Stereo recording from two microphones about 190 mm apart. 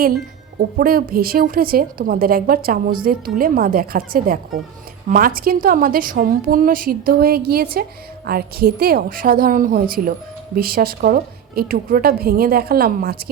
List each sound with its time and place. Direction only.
0.6 s speech: 50° right (ahead or behind)